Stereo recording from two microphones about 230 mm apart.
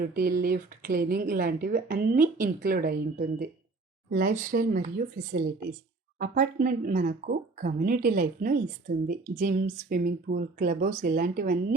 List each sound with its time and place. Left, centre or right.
0.0 s a woman's voice: right